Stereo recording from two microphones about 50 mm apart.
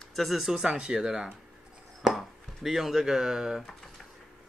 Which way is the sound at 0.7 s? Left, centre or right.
Centre.